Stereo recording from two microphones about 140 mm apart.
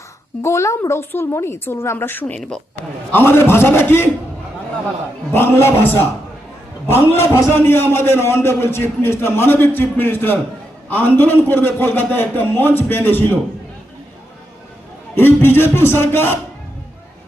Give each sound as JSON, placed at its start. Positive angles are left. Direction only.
{"t": 0.4, "sound": "a man's voice", "side_deg": 20}
{"t": 3.1, "sound": "a man's voice", "side_deg": 15}
{"t": 5.3, "sound": "a man's voice", "side_deg": 15}
{"t": 15.1, "sound": "a man's voice", "side_deg": 15}